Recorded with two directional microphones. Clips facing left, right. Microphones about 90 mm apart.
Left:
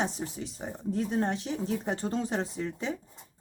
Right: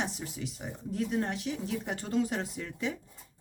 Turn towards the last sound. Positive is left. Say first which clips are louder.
# left 1 dB
turn(degrees=30)  # may be behind; listen again after turning